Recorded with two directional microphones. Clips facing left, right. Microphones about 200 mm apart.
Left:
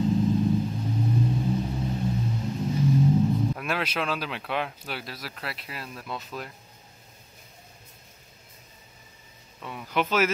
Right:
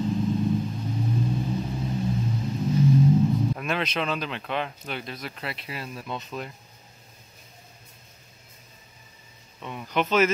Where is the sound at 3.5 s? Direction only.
5° left (ahead or behind).